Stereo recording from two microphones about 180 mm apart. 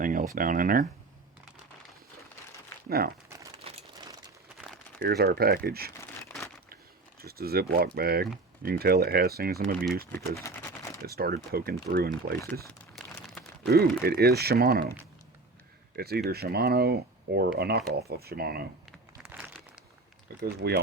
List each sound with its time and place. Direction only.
0.0 s a sound: 50° right (ahead or behind)
0.3 s speech: 50° right (ahead or behind)
2.9 s speech: 60° right (ahead or behind)
5.0 s speech: 60° right (ahead or behind)
7.2 s speech: 60° right (ahead or behind)
10.3 s speech: 15° left (ahead or behind)
11.0 s speech: 60° right (ahead or behind)
13.0 s a sound: centre (ahead or behind)
14.0 s speech: 60° right (ahead or behind)
16.0 s speech: 60° right (ahead or behind)
18.9 s crumpling: 10° right (ahead or behind)
20.4 s speech: 65° right (ahead or behind)